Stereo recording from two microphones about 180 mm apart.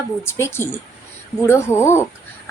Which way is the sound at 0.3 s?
15° left (ahead or behind).